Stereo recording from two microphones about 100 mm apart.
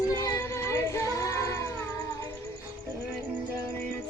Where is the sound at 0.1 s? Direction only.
35° left (ahead or behind).